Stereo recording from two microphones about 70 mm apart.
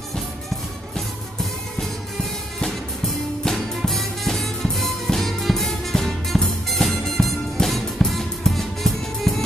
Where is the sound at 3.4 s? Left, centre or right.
Centre.